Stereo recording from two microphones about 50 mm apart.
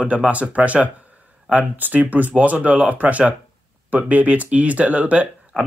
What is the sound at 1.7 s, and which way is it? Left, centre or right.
Speech, right.